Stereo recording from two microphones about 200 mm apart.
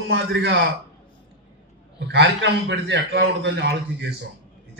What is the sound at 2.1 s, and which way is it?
A man's voice, 60° right (ahead or behind).